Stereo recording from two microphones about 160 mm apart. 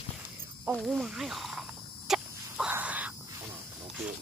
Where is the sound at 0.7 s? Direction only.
Centre (ahead or behind).